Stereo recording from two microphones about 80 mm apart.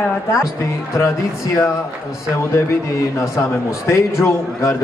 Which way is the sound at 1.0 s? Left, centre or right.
Left.